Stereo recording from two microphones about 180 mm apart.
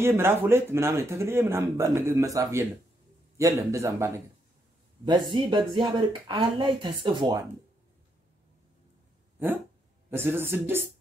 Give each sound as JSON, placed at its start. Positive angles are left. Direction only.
{"t": 0.0, "sound": "speech", "side_deg": -15}
{"t": 10.1, "sound": "speech", "side_deg": -10}